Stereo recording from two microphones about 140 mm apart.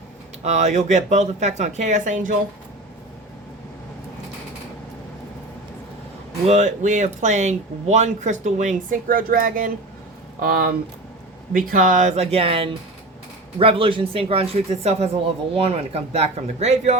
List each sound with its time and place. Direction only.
0.4 s speech: 55° right (ahead or behind)
6.4 s speech: 55° right (ahead or behind)